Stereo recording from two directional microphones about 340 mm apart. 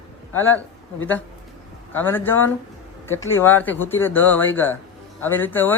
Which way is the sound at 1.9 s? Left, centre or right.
Centre.